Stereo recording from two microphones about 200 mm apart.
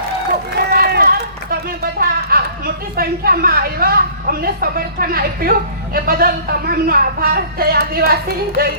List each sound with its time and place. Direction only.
0.6 s speech: 55° right (ahead or behind)